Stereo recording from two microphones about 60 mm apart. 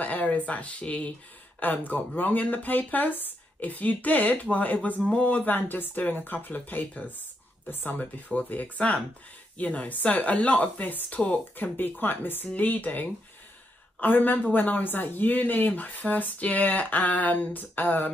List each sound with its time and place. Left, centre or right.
0.0 s speech: left
11.1 s speech: centre
11.5 s speech: left